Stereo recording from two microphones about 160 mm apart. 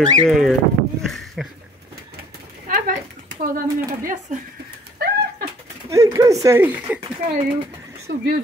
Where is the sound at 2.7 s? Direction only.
60° right (ahead or behind).